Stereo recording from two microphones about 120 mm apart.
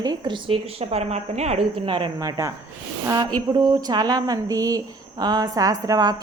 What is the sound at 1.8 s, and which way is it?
Speech, 45° right (ahead or behind).